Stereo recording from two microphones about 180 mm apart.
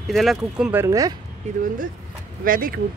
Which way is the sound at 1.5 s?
40° right (ahead or behind).